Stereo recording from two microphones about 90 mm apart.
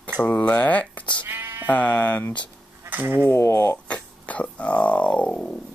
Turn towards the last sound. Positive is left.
turn(degrees=10)  # may be behind; listen again after turning